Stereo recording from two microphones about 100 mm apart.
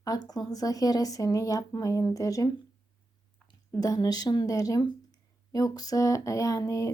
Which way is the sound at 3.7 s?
40° left (ahead or behind).